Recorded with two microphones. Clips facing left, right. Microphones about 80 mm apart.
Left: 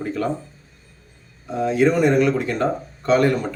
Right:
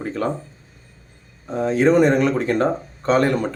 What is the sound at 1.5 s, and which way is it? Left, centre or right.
Speech, right.